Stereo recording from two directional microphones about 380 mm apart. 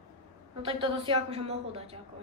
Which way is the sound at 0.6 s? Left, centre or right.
Centre.